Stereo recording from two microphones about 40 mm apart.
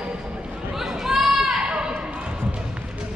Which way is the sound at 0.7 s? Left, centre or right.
Centre.